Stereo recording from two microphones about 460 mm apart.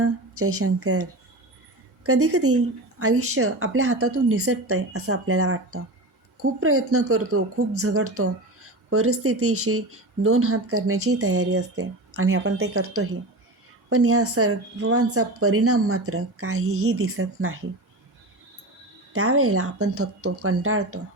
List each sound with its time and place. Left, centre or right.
0.0 s speech: right
2.0 s speech: right
19.1 s speech: right